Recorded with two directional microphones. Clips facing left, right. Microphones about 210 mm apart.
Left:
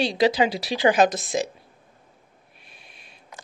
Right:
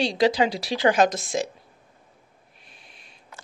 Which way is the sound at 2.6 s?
10° left (ahead or behind).